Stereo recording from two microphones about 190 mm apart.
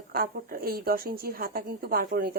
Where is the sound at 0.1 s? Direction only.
50° right (ahead or behind).